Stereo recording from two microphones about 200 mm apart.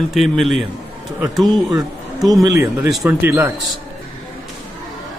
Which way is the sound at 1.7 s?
20° right (ahead or behind).